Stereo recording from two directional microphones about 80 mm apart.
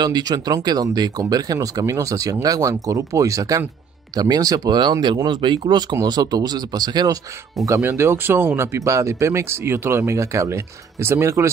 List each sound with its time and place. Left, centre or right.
0.0 s speech: right
7.6 s speech: right